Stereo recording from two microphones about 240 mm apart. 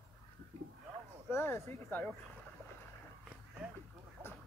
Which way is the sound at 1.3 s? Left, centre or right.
Centre.